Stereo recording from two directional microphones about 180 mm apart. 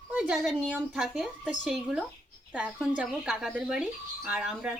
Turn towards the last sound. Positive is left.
turn(degrees=-5)  # may be behind; listen again after turning